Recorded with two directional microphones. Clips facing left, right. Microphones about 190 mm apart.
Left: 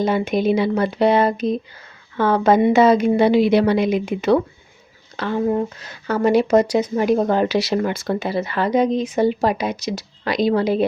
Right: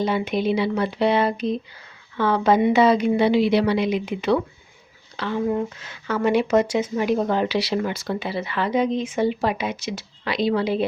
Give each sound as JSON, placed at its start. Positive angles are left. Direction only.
{"t": 0.0, "sound": "a woman's voice", "side_deg": 45}